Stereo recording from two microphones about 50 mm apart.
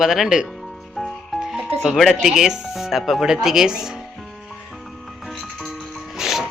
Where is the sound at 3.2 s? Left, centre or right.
Centre.